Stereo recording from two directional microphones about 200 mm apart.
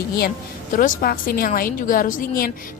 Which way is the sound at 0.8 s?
45° left (ahead or behind).